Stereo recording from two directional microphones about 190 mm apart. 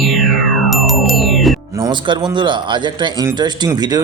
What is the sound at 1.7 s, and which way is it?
A man's voice, 20° right (ahead or behind).